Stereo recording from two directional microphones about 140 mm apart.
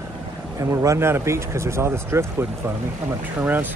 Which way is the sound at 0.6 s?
20° right (ahead or behind).